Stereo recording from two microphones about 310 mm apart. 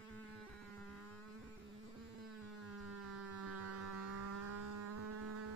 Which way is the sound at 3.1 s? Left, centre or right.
Right.